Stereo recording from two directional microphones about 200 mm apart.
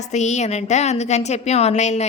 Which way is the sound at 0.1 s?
35° left (ahead or behind).